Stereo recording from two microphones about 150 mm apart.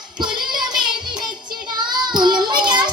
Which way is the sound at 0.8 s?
30° right (ahead or behind).